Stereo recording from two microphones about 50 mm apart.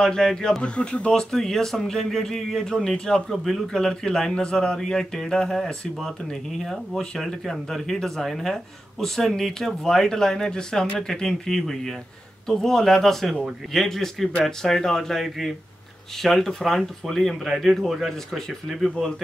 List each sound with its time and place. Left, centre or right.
0.0 s speech: centre
0.6 s speech: left
1.3 s speech: centre